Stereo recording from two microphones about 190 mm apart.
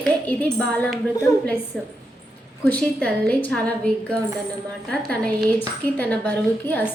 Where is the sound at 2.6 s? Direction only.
5° left (ahead or behind).